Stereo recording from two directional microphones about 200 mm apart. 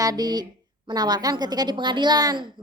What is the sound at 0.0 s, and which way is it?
A woman's voice, 20° right (ahead or behind).